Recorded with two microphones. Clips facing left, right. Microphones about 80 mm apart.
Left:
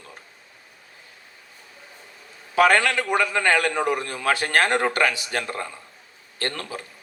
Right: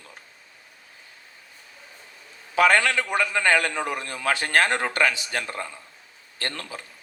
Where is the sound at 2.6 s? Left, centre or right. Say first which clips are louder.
Left 1 dB; left.